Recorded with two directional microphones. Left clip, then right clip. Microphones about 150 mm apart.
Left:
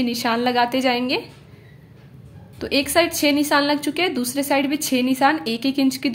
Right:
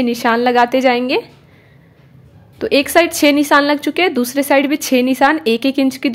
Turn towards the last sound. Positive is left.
turn(degrees=-35)  # may be behind; listen again after turning